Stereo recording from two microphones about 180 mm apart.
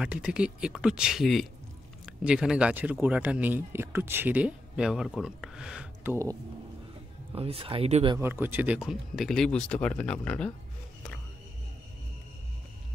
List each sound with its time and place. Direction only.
0.0 s speech: 5° right (ahead or behind)
7.3 s speech: 30° right (ahead or behind)
8.2 s speech: 10° right (ahead or behind); by 10.5 s 5° left (ahead or behind)